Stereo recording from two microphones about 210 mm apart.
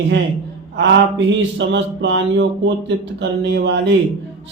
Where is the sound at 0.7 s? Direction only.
55° right (ahead or behind).